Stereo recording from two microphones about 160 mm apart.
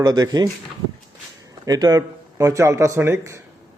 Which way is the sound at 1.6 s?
25° right (ahead or behind).